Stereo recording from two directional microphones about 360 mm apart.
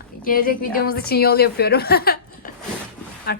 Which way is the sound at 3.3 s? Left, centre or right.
Left.